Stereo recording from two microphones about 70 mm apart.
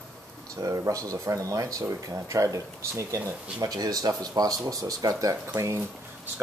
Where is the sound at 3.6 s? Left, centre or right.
Right.